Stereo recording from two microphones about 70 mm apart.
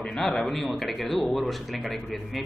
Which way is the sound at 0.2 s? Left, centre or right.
Centre.